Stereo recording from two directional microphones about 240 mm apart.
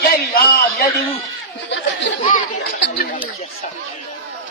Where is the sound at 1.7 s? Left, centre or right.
Left.